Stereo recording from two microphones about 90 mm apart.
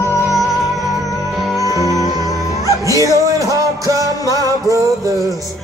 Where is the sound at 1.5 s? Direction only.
40° left (ahead or behind).